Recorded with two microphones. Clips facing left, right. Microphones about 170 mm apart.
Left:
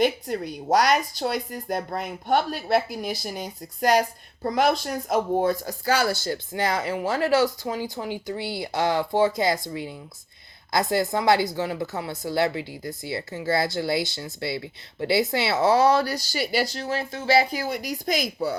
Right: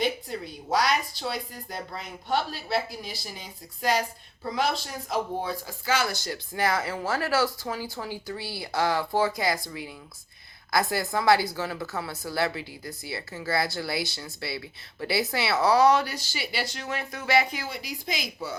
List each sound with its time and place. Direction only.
0.0 s speech: 45° left (ahead or behind)